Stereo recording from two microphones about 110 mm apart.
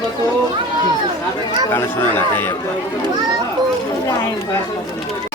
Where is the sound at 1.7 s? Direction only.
20° left (ahead or behind).